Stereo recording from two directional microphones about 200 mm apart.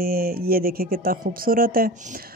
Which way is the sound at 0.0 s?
50° right (ahead or behind).